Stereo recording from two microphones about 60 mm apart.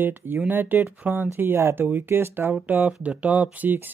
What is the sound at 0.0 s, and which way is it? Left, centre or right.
Speech, right.